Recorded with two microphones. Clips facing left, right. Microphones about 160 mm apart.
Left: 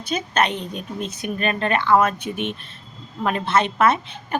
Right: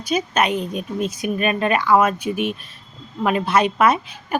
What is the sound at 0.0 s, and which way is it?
A woman's voice, 10° right (ahead or behind).